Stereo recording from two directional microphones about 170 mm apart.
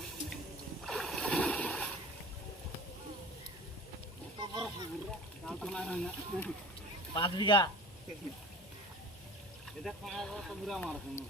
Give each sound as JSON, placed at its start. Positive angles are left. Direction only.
{"t": 0.9, "sound": "rowboat", "side_deg": 0}
{"t": 4.4, "sound": "splash", "side_deg": -25}
{"t": 5.5, "sound": "speech", "side_deg": 5}
{"t": 7.1, "sound": "speech", "side_deg": 25}
{"t": 9.8, "sound": "speech", "side_deg": 5}